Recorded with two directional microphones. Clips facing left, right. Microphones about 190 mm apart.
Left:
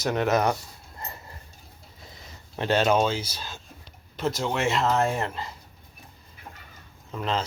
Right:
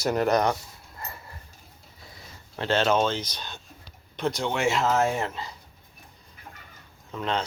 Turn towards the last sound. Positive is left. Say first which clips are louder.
# even
turn(degrees=5)  # may be behind; listen again after turning